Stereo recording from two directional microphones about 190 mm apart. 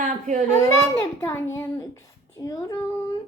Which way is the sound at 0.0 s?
40° right (ahead or behind).